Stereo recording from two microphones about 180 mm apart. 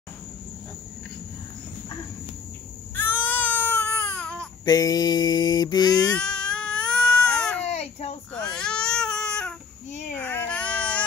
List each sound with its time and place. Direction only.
3.3 s baby cry: 10° left (ahead or behind)
4.6 s speech: 20° left (ahead or behind)
6.1 s baby cry: 5° left (ahead or behind)
7.6 s baby cry: 35° left (ahead or behind)
8.3 s baby cry: 5° left (ahead or behind)